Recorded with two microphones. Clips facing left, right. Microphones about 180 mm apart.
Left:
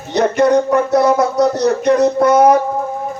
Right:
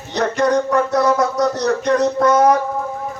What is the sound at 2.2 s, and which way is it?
Speech, 15° left (ahead or behind).